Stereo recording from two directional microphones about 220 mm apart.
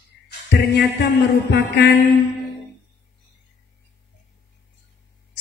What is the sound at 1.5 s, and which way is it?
Speech, 50° left (ahead or behind).